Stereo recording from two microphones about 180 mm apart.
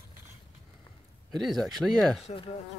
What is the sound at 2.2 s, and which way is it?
Speech, 30° left (ahead or behind).